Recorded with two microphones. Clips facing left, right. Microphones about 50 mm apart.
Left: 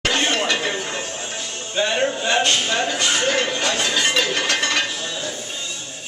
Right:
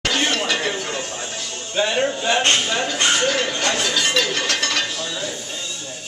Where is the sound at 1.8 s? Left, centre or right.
Centre.